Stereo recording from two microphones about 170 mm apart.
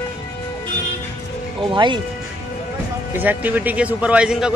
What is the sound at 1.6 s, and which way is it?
Speech, 30° right (ahead or behind).